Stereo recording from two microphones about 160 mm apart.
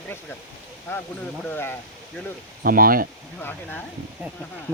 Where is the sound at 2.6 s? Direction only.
65° right (ahead or behind).